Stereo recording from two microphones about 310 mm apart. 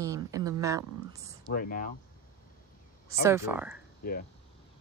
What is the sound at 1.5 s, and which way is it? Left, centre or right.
Speech, left.